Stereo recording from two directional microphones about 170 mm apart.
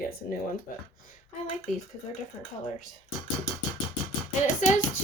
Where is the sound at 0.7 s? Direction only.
55° left (ahead or behind).